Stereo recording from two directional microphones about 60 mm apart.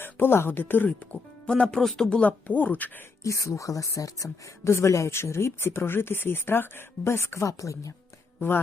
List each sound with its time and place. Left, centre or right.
0.0 s speech: left
1.5 s speech: centre
2.5 s speech: left
3.2 s speech: left
4.7 s speech: left
8.4 s speech: left